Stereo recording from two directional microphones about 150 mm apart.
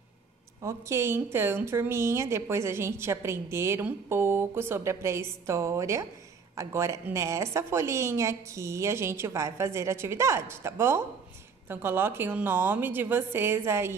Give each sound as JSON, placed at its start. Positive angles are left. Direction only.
{"t": 0.6, "sound": "a woman's voice", "side_deg": -20}